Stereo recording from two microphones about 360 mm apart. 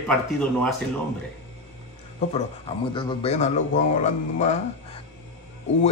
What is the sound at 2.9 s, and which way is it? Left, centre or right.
Speech, centre.